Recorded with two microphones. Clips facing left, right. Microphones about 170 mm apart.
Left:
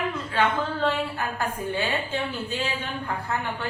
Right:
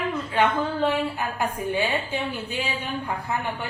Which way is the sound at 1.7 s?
15° right (ahead or behind).